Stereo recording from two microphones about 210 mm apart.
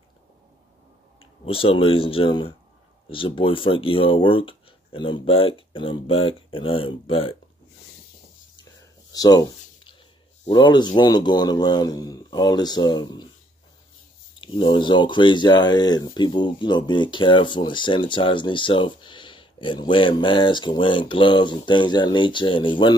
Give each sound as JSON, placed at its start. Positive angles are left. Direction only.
{"t": 1.2, "sound": "speech", "side_deg": 25}
{"t": 9.1, "sound": "a sound", "side_deg": 20}
{"t": 10.4, "sound": "speech", "side_deg": 20}
{"t": 14.4, "sound": "speech", "side_deg": 25}